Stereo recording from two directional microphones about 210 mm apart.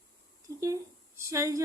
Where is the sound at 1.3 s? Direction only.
15° right (ahead or behind).